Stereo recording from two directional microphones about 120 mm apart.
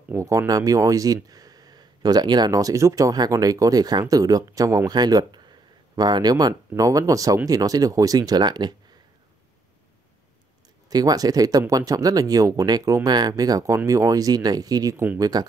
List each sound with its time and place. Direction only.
0.1 s speech: 25° right (ahead or behind)
10.9 s speech: 30° right (ahead or behind)